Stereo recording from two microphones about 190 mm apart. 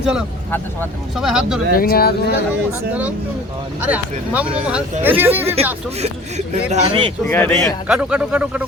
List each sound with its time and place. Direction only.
0.0 s a man's voice: 5° right (ahead or behind)
1.7 s speech: 50° left (ahead or behind)
3.8 s speech: 5° right (ahead or behind)
6.0 s speech: 35° right (ahead or behind)
7.3 s a man's voice: 10° left (ahead or behind)